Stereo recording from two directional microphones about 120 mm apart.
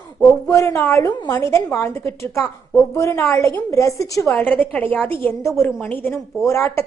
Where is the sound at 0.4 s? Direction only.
20° left (ahead or behind).